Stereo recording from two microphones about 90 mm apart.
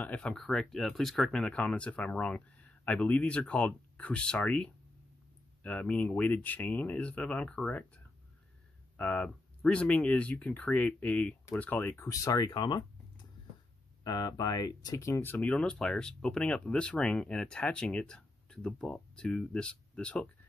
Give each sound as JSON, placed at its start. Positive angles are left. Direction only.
{"t": 0.0, "sound": "speech", "side_deg": 15}
{"t": 12.1, "sound": "speech", "side_deg": 40}
{"t": 15.2, "sound": "speech", "side_deg": 15}